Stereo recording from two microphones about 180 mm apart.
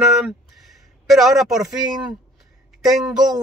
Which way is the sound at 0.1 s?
Centre (ahead or behind).